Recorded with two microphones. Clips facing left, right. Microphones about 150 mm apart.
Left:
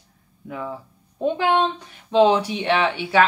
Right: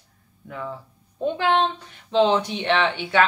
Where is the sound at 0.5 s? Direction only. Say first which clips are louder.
Left 2 dB; 10° left (ahead or behind).